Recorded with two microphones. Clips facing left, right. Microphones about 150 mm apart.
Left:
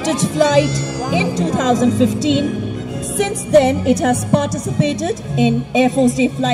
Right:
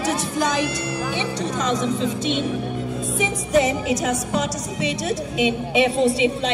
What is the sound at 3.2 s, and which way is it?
A woman's voice, 65° left (ahead or behind).